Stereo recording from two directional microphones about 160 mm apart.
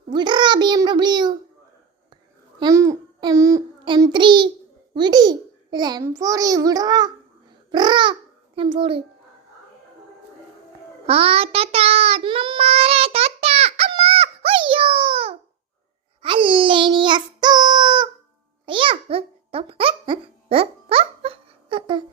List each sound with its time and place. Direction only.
0.1 s a child's voice: 30° right (ahead or behind)
2.6 s a child's voice: 20° right (ahead or behind)
11.0 s child singing: 35° right (ahead or behind)
18.6 s babbling: 35° right (ahead or behind)